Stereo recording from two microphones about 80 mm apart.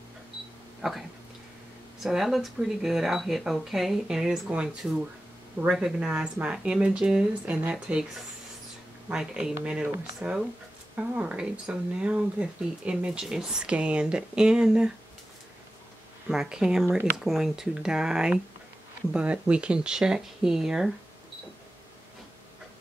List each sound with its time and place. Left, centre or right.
2.0 s speech: centre
5.7 s speech: centre
9.1 s speech: centre
16.3 s speech: centre